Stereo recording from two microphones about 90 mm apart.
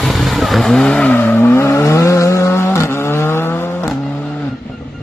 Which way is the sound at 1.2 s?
25° left (ahead or behind).